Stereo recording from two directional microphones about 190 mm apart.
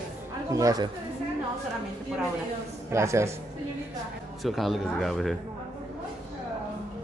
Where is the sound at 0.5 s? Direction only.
15° right (ahead or behind).